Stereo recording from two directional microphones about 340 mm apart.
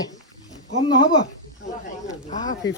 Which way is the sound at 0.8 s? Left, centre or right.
Centre.